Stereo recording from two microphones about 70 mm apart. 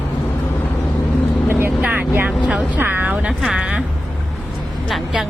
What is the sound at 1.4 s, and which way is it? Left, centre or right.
Vehicle, right.